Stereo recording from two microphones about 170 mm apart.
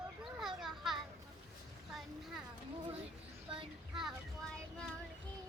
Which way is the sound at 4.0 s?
5° left (ahead or behind).